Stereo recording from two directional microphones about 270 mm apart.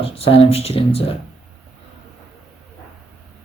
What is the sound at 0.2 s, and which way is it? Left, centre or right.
Speech, left.